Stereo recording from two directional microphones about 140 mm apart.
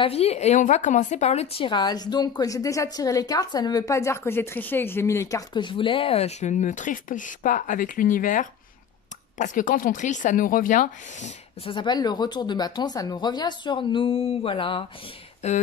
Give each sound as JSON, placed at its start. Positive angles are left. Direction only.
{"t": 0.0, "sound": "a woman's voice", "side_deg": 45}
{"t": 5.5, "sound": "speech", "side_deg": 35}
{"t": 11.6, "sound": "speech", "side_deg": 35}
{"t": 15.4, "sound": "speech", "side_deg": 55}